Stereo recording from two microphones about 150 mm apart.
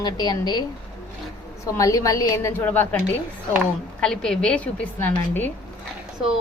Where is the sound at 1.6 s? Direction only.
20° left (ahead or behind).